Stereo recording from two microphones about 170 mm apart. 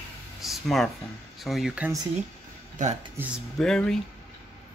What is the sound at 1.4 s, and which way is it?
Speech, centre (ahead or behind).